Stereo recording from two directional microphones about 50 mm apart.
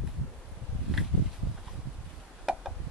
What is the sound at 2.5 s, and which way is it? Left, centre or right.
Tick, centre.